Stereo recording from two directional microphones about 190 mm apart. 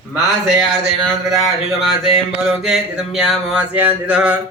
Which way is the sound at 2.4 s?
Centre (ahead or behind).